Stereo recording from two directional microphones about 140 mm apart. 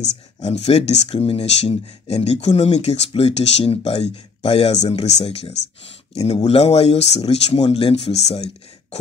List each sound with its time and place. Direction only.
0.4 s speech: 50° left (ahead or behind)